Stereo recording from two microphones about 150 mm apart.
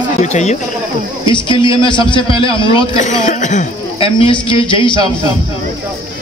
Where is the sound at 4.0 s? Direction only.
35° left (ahead or behind).